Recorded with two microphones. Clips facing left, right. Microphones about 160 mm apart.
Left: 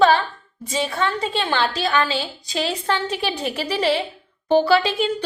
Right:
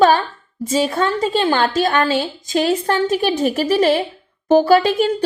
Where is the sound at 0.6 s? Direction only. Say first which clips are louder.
Right 5 dB; 45° right (ahead or behind).